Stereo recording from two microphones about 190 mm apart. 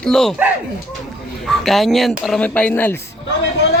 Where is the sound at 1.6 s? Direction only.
Centre (ahead or behind).